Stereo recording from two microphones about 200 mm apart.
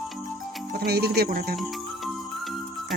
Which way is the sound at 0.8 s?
50° right (ahead or behind).